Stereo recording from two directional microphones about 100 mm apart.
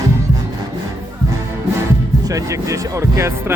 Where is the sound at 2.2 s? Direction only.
35° right (ahead or behind).